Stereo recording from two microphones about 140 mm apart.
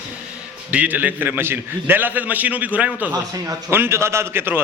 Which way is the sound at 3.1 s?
25° right (ahead or behind).